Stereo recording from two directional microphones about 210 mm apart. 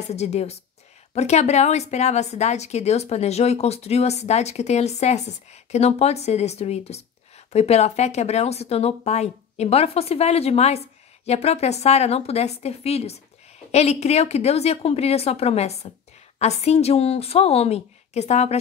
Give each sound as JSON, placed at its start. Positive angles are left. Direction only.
{"t": 0.1, "sound": "speech", "side_deg": 30}